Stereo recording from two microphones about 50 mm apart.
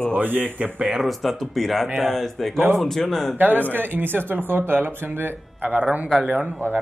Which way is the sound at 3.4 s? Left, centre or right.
Right.